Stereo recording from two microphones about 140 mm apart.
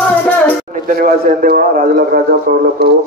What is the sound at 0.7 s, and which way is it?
A man's voice, 75° right (ahead or behind).